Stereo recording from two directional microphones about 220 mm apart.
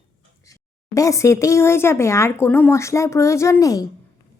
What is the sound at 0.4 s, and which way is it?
Speech, 15° left (ahead or behind).